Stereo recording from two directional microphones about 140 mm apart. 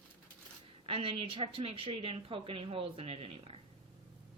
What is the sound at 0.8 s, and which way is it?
A woman's voice, 40° right (ahead or behind).